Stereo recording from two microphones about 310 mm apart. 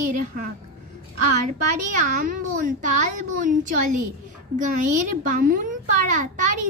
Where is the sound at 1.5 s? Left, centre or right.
Right.